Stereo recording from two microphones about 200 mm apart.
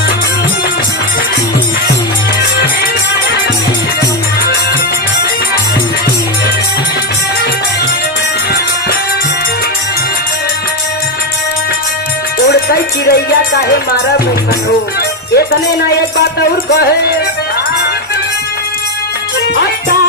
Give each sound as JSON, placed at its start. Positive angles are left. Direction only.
{"t": 12.5, "sound": "music", "side_deg": 50}
{"t": 16.0, "sound": "music", "side_deg": 55}